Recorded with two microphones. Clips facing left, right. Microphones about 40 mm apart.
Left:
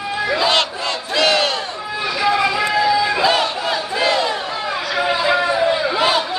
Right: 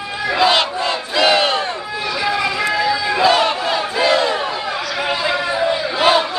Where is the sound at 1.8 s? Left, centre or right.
Centre.